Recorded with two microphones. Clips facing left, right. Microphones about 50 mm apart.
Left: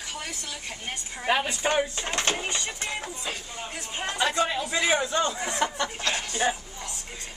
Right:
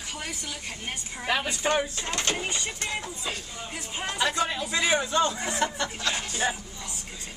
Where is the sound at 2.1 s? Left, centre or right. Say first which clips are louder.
Left 2 dB; left.